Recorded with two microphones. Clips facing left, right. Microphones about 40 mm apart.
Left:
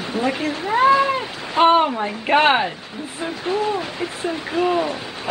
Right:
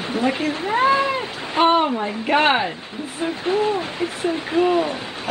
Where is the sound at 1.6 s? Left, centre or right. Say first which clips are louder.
Left 2 dB; centre.